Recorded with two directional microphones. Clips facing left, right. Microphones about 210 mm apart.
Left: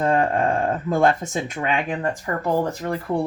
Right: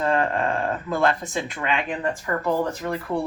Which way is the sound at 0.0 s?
45° left (ahead or behind).